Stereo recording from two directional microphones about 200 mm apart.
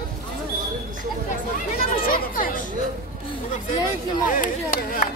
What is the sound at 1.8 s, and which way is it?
Speech, 45° left (ahead or behind).